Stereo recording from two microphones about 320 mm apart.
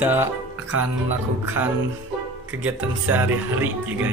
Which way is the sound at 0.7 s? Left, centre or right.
Right.